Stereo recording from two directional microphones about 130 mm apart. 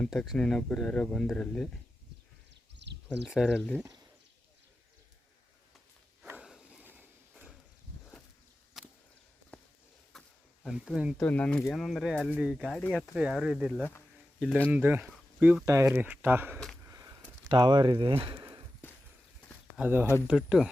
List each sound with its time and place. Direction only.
0.0 s speech: 5° left (ahead or behind)
3.4 s speech: 10° left (ahead or behind)
6.4 s a sound: 5° right (ahead or behind)
8.8 s a sound: centre (ahead or behind)
10.8 s speech: 5° right (ahead or behind)
11.2 s speech: 10° left (ahead or behind)
14.7 s speech: 15° right (ahead or behind)
16.8 s sniff: 25° right (ahead or behind)
17.5 s speech: 35° right (ahead or behind)
18.2 s a sound: 35° right (ahead or behind)
19.7 s speech: 15° right (ahead or behind)